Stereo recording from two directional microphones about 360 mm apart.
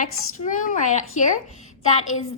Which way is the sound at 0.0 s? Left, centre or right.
Left.